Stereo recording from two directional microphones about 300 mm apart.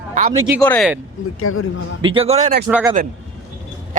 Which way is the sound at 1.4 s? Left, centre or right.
Left.